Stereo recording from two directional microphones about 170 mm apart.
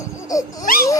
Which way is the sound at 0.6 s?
60° left (ahead or behind).